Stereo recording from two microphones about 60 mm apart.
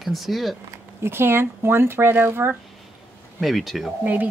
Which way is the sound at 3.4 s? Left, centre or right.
Centre.